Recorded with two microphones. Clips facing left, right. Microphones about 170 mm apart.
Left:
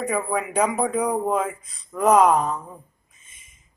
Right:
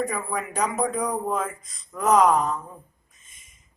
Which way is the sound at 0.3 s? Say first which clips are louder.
Left 4 dB; 10° left (ahead or behind).